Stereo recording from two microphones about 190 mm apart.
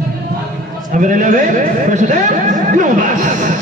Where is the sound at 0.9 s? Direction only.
45° right (ahead or behind).